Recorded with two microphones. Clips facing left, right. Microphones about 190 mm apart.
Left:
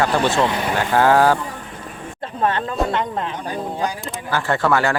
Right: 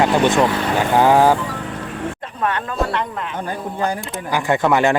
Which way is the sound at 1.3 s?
80° right.